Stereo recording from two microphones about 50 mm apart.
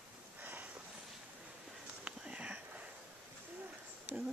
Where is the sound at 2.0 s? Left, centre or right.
Right.